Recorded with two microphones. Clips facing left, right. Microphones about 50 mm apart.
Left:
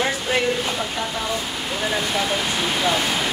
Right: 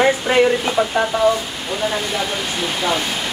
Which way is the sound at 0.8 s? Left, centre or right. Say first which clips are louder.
Right 9 dB; right.